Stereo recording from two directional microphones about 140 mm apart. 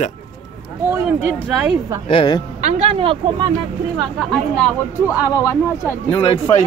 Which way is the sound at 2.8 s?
45° right (ahead or behind).